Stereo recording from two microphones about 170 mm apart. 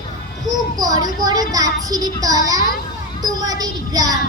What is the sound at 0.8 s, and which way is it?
A child's voice, 20° right (ahead or behind).